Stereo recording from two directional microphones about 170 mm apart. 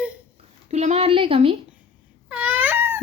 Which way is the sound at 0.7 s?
40° right (ahead or behind).